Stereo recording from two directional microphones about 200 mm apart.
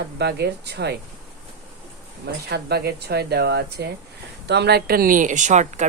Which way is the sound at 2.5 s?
55° right (ahead or behind).